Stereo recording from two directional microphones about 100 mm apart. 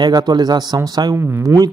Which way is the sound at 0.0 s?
45° right (ahead or behind).